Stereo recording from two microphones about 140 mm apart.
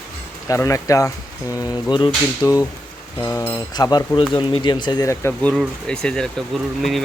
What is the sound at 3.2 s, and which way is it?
Speech, 15° left (ahead or behind).